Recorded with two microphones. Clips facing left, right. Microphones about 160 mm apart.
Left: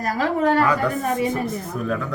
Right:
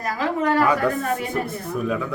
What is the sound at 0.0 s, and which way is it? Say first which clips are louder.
Speech: left 2 dB; 40° left (ahead or behind).